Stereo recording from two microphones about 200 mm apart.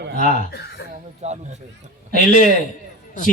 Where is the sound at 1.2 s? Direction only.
35° right (ahead or behind).